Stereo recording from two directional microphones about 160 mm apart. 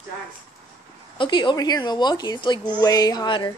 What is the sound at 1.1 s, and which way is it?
A child's voice, 30° left (ahead or behind).